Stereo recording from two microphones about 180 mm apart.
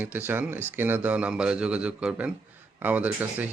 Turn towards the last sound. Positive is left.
turn(degrees=-10)  # may be behind; listen again after turning